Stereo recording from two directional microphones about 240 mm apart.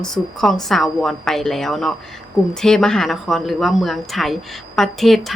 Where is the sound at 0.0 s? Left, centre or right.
Centre.